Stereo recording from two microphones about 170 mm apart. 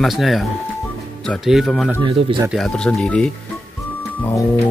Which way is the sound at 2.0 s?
30° right (ahead or behind).